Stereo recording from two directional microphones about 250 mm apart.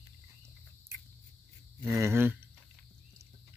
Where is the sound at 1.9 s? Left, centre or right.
Centre.